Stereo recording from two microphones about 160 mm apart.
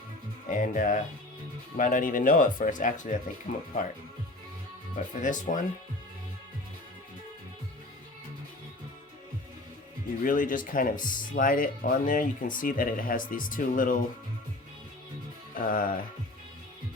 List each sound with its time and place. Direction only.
0.4 s speech: 55° left (ahead or behind)
4.9 s speech: 50° left (ahead or behind)
10.2 s speech: 55° left (ahead or behind)
15.5 s speech: 60° left (ahead or behind)